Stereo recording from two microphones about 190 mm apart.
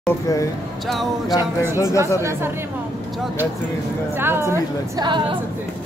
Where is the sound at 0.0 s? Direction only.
15° left (ahead or behind).